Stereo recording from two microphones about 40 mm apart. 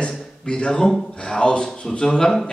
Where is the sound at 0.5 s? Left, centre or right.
Left.